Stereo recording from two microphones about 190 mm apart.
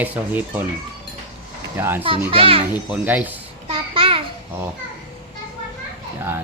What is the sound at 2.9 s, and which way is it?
Speech, 10° right (ahead or behind).